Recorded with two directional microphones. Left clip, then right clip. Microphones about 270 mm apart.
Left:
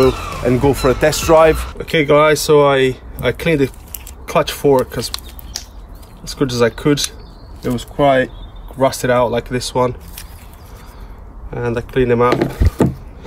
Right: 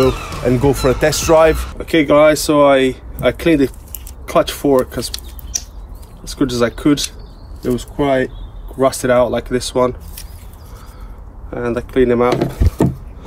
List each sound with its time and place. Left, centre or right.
0.0 s speech: centre
1.8 s speech: left
6.2 s speech: left
11.5 s speech: left